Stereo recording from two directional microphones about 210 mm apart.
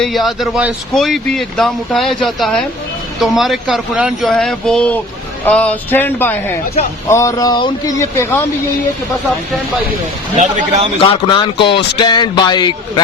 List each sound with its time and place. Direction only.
0.0 s speech: centre (ahead or behind)
10.3 s a man's voice: 35° right (ahead or behind)
11.0 s speech: 25° left (ahead or behind)